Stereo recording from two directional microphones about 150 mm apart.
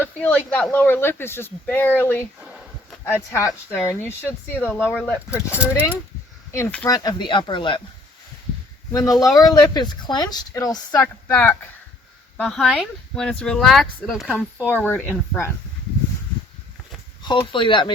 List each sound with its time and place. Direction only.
0.2 s speech: 10° left (ahead or behind)
3.3 s speech: 15° left (ahead or behind)
5.5 s speech: 10° right (ahead or behind)
6.8 s speech: 25° left (ahead or behind)
8.9 s speech: 20° left (ahead or behind)
10.9 s speech: 15° left (ahead or behind)
12.4 s speech: centre (ahead or behind)
14.3 s speech: 10° left (ahead or behind)
17.2 s speech: 35° left (ahead or behind)